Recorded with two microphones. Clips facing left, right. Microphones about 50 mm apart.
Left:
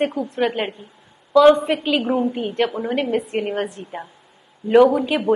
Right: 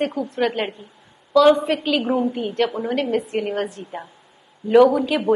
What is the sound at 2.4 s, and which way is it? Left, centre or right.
A woman's voice, centre.